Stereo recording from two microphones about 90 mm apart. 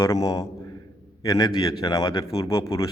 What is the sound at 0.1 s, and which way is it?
A man's voice, 40° left (ahead or behind).